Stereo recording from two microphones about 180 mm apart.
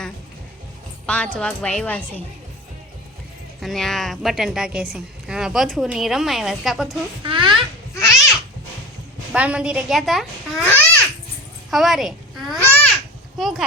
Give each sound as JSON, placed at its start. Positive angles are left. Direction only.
{"t": 1.0, "sound": "a woman's voice", "side_deg": 5}
{"t": 3.6, "sound": "a woman's voice", "side_deg": 0}
{"t": 7.2, "sound": "a sound", "side_deg": -25}
{"t": 9.3, "sound": "a woman's voice", "side_deg": -5}
{"t": 10.6, "sound": "babbling", "side_deg": 10}
{"t": 11.7, "sound": "a child's voice", "side_deg": 0}
{"t": 12.6, "sound": "babbling", "side_deg": 10}
{"t": 13.4, "sound": "a woman's voice", "side_deg": 0}